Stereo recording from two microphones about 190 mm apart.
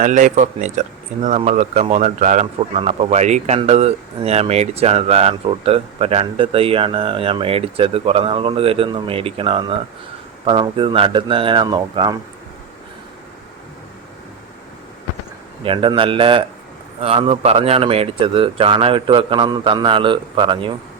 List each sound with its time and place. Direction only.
0.0 s speech: 40° right (ahead or behind); by 12.1 s 20° right (ahead or behind)
15.6 s speech: 25° right (ahead or behind)